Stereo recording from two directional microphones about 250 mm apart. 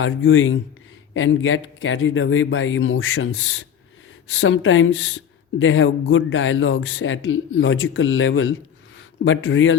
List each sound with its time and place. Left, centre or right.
0.0 s speech: left